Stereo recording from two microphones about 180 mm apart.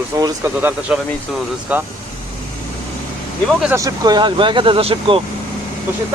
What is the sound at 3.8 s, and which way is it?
Speech, 20° right (ahead or behind).